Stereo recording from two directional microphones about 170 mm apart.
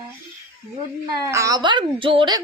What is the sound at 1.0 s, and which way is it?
A woman's voice, 20° right (ahead or behind).